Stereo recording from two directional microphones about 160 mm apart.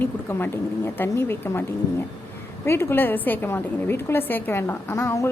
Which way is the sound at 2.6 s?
15° left (ahead or behind).